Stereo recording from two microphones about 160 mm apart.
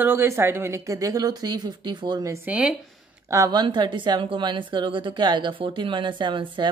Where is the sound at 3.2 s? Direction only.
20° right (ahead or behind).